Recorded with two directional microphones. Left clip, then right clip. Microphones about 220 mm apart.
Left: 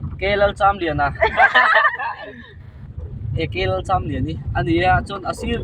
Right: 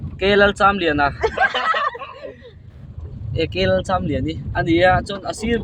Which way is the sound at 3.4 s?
35° right (ahead or behind).